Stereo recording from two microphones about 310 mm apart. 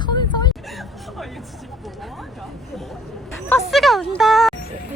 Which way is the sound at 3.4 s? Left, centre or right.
Centre.